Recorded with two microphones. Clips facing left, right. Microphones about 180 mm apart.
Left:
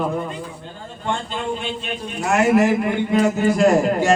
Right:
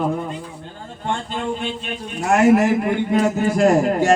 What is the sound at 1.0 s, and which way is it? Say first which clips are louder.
A man's voice: right 1 dB; 50° right (ahead or behind).